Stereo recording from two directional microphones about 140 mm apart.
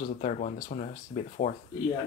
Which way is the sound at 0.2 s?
65° left (ahead or behind).